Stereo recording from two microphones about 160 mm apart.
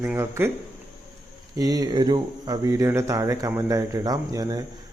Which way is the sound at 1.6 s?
25° right (ahead or behind).